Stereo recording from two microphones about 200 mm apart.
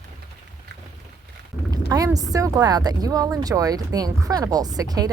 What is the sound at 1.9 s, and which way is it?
Speech, 20° right (ahead or behind).